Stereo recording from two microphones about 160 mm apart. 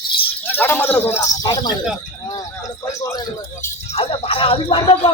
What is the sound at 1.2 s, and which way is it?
Speech, 25° left (ahead or behind).